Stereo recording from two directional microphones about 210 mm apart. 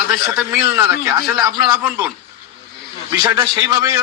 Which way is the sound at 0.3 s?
15° right (ahead or behind).